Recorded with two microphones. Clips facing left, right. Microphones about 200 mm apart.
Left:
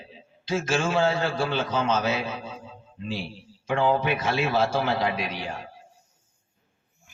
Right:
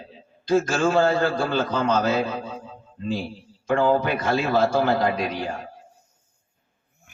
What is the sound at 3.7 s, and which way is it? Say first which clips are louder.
A man's voice: right 3 dB; 40° right (ahead or behind).